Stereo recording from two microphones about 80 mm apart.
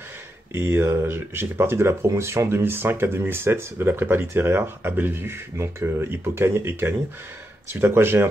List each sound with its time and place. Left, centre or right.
0.5 s speech: right